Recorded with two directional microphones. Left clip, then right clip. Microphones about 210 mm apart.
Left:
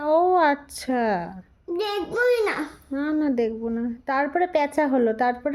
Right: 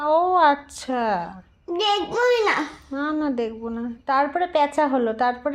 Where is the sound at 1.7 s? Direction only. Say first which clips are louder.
Right 5 dB; 10° left (ahead or behind).